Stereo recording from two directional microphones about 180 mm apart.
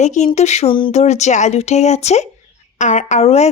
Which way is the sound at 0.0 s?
40° left (ahead or behind).